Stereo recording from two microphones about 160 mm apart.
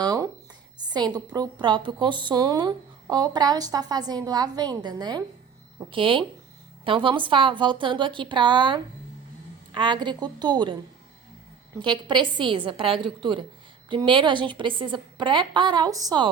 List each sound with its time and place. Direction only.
0.0 s a sound: 25° right (ahead or behind)
0.9 s a woman's voice: 25° right (ahead or behind)
11.8 s a woman's voice: 30° right (ahead or behind)